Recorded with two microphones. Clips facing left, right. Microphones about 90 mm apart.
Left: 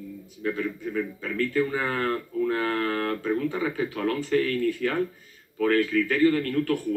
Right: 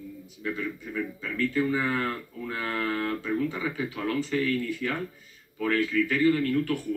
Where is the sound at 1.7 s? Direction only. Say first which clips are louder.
Left 2 dB; 40° left (ahead or behind).